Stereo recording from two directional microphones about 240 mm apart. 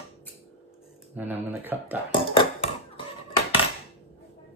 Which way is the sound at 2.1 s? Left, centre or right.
Left.